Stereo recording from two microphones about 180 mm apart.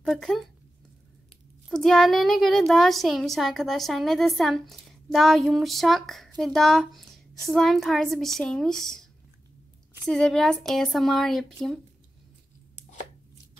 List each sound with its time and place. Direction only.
0.0 s a child's voice: centre (ahead or behind)
1.7 s a child's voice: centre (ahead or behind)
8.8 s a sound: centre (ahead or behind)
10.0 s a child's voice: 5° left (ahead or behind)